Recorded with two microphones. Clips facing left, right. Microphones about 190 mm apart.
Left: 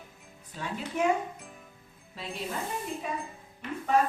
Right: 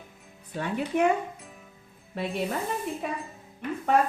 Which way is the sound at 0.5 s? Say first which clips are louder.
Right 6 dB; 60° right (ahead or behind).